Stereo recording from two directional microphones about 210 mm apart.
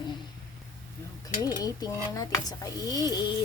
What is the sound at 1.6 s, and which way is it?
Speech, 20° left (ahead or behind).